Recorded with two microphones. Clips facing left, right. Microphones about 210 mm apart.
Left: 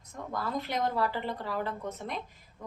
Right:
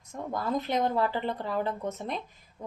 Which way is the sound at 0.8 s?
20° right (ahead or behind).